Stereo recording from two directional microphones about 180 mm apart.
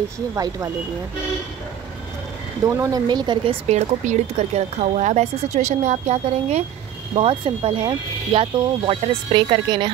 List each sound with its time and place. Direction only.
2.6 s speech: 20° right (ahead or behind)
3.6 s a woman's voice: 40° right (ahead or behind)